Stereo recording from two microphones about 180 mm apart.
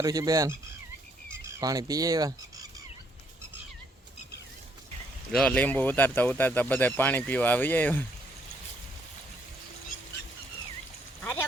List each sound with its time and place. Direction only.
0.0 s speech: 20° right (ahead or behind)
1.5 s a sound: 20° right (ahead or behind)
5.3 s speech: 5° left (ahead or behind)
11.2 s duck: 10° left (ahead or behind)